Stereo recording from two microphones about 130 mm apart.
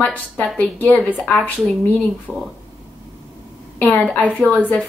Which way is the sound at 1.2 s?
Centre (ahead or behind).